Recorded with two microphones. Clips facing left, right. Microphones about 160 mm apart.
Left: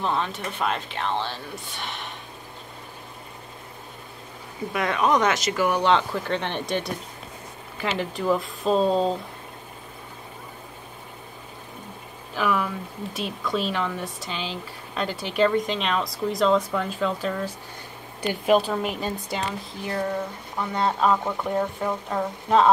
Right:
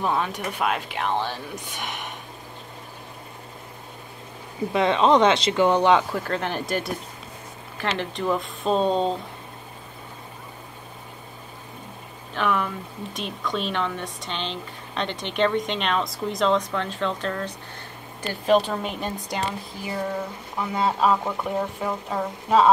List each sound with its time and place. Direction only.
0.0 s speech: 10° right (ahead or behind)
4.7 s speech: 25° right (ahead or behind)
6.2 s speech: 5° right (ahead or behind)
12.4 s speech: centre (ahead or behind)